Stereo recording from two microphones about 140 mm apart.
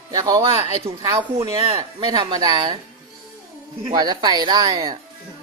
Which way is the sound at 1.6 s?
40° right (ahead or behind).